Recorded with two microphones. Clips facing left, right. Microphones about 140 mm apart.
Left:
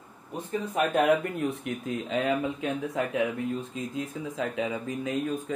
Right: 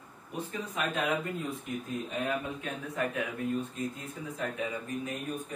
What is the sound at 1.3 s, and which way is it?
Speech, 75° left (ahead or behind).